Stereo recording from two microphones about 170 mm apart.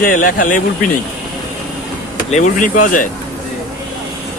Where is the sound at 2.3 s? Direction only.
50° left (ahead or behind).